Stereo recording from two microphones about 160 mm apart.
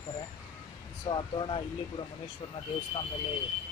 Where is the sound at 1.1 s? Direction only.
30° left (ahead or behind).